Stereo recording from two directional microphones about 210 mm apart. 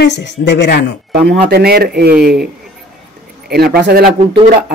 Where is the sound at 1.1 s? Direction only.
50° right (ahead or behind).